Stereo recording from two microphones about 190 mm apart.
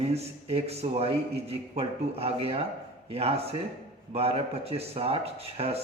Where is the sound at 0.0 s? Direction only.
35° right (ahead or behind).